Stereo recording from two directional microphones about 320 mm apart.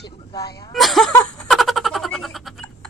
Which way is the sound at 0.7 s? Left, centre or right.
Centre.